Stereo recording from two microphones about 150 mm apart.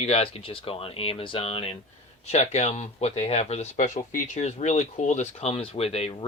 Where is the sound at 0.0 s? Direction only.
40° left (ahead or behind).